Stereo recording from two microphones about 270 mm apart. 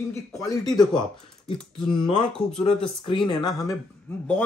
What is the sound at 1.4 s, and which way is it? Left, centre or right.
Speech, centre.